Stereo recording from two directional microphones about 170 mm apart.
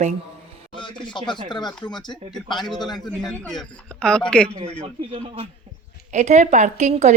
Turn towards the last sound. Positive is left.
turn(degrees=-40)  # may be behind; listen again after turning